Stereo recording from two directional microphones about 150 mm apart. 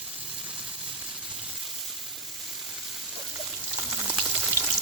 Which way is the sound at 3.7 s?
15° right (ahead or behind).